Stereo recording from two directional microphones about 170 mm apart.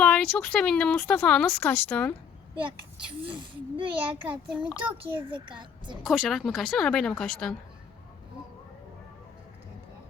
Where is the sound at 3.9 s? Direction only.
5° right (ahead or behind).